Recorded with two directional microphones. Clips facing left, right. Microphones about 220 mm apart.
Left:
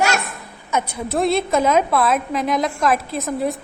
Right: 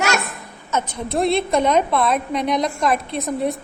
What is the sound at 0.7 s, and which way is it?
Speech, 10° left (ahead or behind).